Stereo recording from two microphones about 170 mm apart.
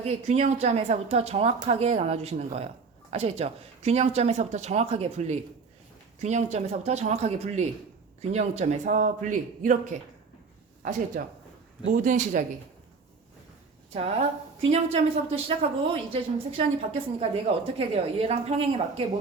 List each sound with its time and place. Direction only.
0.0 s a man's voice: 40° right (ahead or behind)
11.1 s a man's voice: 55° right (ahead or behind)
13.9 s speech: 35° right (ahead or behind)